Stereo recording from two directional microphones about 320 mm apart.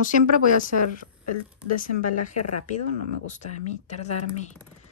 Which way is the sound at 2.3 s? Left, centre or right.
Left.